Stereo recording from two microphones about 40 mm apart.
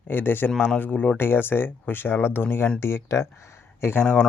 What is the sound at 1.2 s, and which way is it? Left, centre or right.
Speech, left.